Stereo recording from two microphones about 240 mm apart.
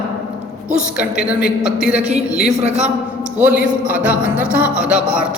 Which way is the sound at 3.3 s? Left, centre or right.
Centre.